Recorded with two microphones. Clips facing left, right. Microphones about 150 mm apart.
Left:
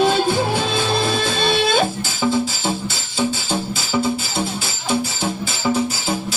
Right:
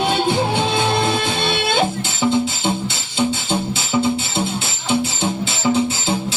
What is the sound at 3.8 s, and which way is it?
Music, 25° right (ahead or behind).